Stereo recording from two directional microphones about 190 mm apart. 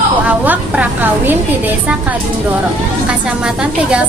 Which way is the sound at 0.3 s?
10° right (ahead or behind).